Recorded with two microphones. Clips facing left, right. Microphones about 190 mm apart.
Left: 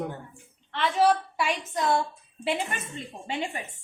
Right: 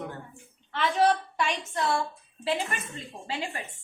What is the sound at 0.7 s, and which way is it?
A woman's voice, centre (ahead or behind).